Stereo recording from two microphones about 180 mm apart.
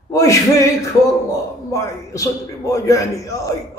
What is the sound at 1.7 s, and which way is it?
A man's voice, 15° left (ahead or behind).